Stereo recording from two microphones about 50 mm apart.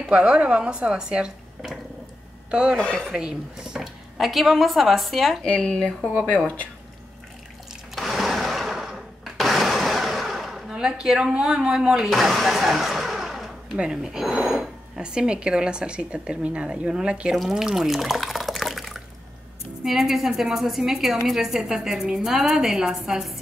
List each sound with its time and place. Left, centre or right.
0.1 s speech: right
3.2 s speech: centre
5.4 s speech: centre
6.2 s speech: left
7.9 s sewing machine: centre
10.7 s a woman's voice: centre
12.1 s speech: centre
13.7 s speech: centre
17.4 s water: centre
19.8 s a woman's voice: centre